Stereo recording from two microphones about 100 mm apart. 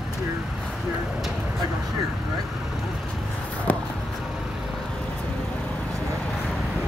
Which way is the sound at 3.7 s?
15° left (ahead or behind).